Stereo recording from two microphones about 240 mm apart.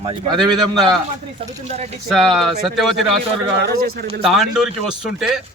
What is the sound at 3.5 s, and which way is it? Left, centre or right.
Speech, right.